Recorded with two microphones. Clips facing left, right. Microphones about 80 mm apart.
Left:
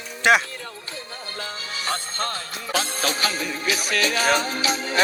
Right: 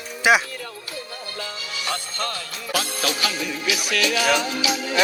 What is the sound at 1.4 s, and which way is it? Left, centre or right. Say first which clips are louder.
Music: left 1 dB; left.